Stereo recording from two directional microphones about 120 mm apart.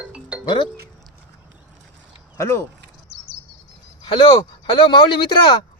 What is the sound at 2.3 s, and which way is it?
Speech, 20° left (ahead or behind).